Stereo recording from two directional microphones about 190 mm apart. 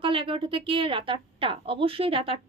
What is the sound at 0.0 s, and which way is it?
A woman's voice, 30° right (ahead or behind).